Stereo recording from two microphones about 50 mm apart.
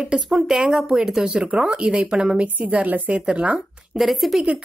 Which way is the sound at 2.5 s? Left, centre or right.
Right.